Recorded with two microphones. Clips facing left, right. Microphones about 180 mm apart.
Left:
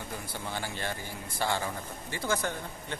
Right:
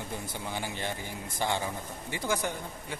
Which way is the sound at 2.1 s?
15° right (ahead or behind).